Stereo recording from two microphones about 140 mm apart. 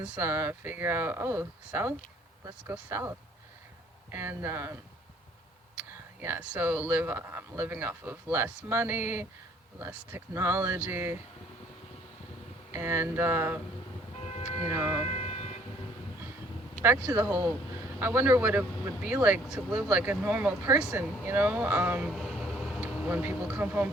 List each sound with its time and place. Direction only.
0.0 s speech: 10° right (ahead or behind)
6.1 s speech: 15° right (ahead or behind)
12.7 s speech: 15° right (ahead or behind)
14.7 s speech: 10° right (ahead or behind)
15.0 s vehicle: 45° left (ahead or behind)
16.8 s speech: 10° right (ahead or behind)